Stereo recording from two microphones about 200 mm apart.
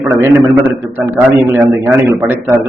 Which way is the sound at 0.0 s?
10° right (ahead or behind).